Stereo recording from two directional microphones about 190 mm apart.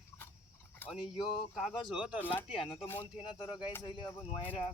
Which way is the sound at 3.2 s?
30° left (ahead or behind).